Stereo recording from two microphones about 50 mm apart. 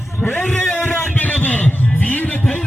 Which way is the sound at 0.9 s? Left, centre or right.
Left.